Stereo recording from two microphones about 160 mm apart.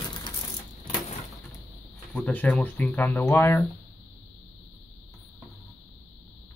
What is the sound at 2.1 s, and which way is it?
Speech, 10° left (ahead or behind).